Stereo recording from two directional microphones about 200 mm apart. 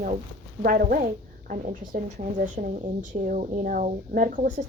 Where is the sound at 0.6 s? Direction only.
45° right (ahead or behind).